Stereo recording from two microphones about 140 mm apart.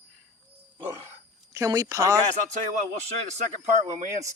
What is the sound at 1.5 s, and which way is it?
Speech, 25° right (ahead or behind).